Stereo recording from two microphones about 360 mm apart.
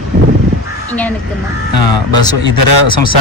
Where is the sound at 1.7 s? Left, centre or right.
Left.